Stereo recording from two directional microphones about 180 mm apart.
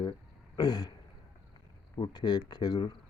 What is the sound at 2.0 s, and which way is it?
Speech, 25° left (ahead or behind).